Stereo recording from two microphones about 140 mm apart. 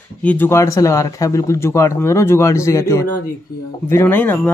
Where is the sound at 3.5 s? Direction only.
90° left.